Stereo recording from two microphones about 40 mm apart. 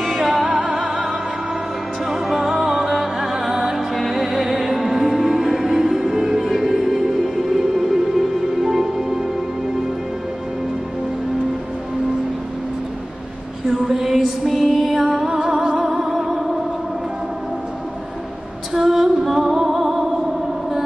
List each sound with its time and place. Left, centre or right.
0.0 s music: centre
3.7 s music: centre
13.7 s a sound: centre
14.5 s music: centre
15.2 s music: centre
15.8 s music: centre
18.7 s music: centre